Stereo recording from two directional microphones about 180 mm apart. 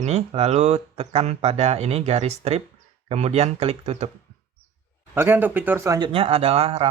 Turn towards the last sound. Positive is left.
turn(degrees=-30)  # may be behind; listen again after turning